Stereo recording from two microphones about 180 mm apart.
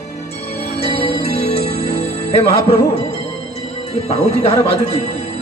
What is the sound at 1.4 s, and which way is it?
Music, 35° left (ahead or behind).